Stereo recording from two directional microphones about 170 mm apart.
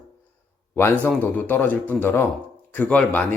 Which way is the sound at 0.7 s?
15° left (ahead or behind).